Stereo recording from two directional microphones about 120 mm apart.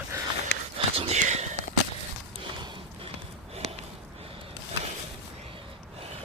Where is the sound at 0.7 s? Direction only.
55° right (ahead or behind).